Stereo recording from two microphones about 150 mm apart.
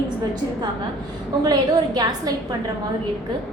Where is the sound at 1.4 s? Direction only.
25° right (ahead or behind).